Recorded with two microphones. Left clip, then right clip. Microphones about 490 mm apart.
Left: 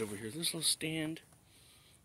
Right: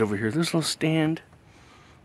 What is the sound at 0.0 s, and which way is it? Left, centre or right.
Speech, left.